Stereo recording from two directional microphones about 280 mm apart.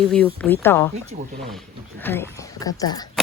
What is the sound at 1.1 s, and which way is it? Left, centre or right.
Speech, right.